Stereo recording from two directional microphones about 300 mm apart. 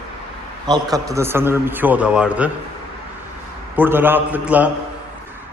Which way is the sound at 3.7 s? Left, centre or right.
Centre.